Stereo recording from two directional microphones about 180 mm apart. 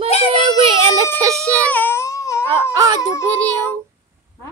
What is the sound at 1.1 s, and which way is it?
Speech, 15° right (ahead or behind).